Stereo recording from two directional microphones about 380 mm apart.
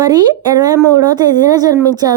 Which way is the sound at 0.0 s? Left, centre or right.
Centre.